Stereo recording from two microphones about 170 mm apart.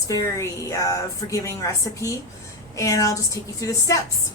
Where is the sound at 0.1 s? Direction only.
20° left (ahead or behind).